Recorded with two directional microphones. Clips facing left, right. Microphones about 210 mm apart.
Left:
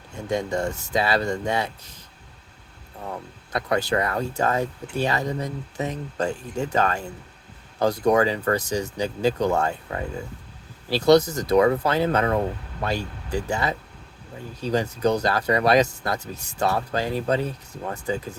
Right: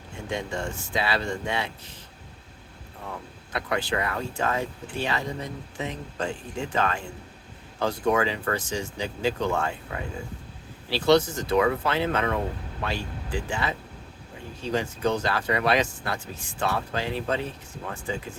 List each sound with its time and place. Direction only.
0.3 s speech: 40° left (ahead or behind)
3.5 s speech: 40° left (ahead or behind)